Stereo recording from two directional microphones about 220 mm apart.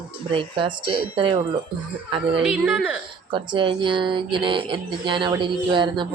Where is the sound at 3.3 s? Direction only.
20° right (ahead or behind).